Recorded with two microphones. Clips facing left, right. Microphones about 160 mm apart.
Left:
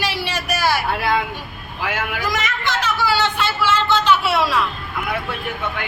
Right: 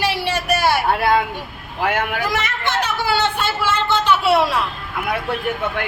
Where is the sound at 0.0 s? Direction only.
60° right (ahead or behind).